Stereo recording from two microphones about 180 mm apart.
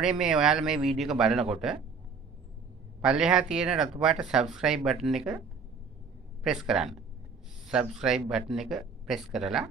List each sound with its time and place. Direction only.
0.0 s speech: 5° right (ahead or behind)
3.0 s speech: 5° right (ahead or behind)
6.4 s speech: 5° right (ahead or behind)